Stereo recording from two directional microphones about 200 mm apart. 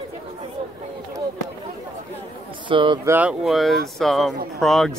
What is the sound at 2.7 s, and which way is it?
Speech, 25° right (ahead or behind).